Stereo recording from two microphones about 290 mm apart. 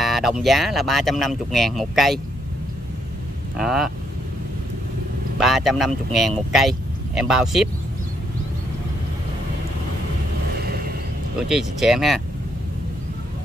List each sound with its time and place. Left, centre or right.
0.0 s speech: centre
3.5 s speech: centre
5.4 s speech: centre
10.6 s a sound: right
11.4 s speech: centre